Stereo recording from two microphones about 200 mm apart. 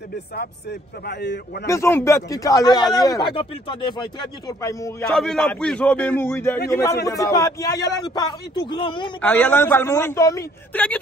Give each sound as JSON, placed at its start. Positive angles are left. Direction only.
{"t": 0.4, "sound": "a man's voice", "side_deg": 55}
{"t": 1.7, "sound": "a man's voice", "side_deg": 15}
{"t": 5.0, "sound": "a man's voice", "side_deg": 0}
{"t": 9.2, "sound": "a man's voice", "side_deg": 10}